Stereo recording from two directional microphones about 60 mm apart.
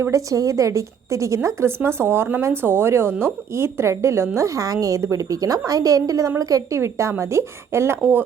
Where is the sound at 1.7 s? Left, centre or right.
Right.